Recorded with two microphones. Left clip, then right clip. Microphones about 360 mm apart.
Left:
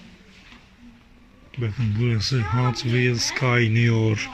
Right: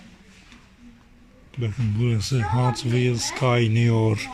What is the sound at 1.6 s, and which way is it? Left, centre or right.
Speech, centre.